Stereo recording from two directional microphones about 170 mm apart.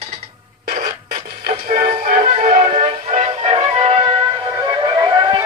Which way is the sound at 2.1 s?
45° right (ahead or behind).